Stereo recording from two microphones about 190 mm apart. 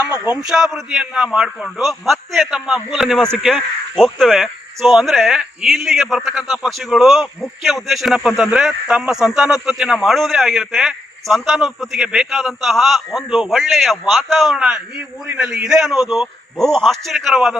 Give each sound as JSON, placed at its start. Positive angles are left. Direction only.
{"t": 0.4, "sound": "a man's voice", "side_deg": 0}